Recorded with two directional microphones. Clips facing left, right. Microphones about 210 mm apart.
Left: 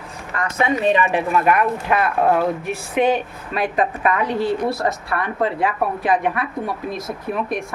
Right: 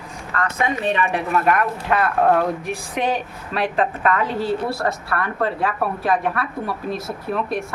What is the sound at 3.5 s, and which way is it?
A woman's voice, 10° left (ahead or behind).